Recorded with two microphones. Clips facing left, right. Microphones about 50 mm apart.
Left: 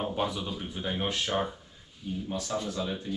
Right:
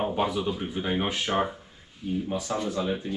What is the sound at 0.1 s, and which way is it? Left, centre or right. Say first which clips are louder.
Speech: right 5 dB; centre.